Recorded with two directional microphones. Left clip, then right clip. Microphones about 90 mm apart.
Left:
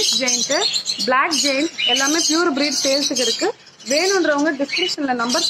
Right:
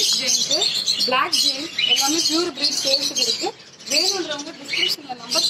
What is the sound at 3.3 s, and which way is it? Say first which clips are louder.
Speech: left 5 dB; 30° left (ahead or behind).